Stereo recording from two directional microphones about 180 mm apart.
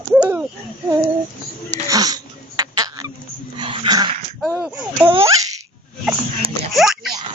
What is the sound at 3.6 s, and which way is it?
Dog, 25° right (ahead or behind).